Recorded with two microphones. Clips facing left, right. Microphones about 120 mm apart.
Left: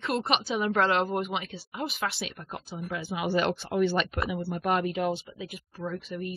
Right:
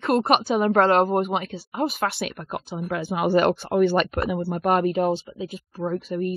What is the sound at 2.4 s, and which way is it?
A woman's voice, 75° right (ahead or behind).